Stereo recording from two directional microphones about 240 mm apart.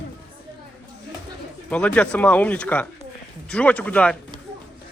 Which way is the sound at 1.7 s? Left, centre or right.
Centre.